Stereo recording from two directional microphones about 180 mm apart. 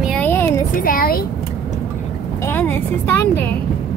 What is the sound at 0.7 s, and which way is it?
Speech, 50° left (ahead or behind).